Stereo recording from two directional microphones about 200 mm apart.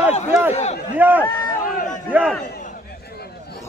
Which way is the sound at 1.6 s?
40° left (ahead or behind).